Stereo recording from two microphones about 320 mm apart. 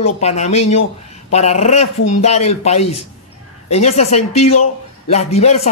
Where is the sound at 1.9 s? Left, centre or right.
Left.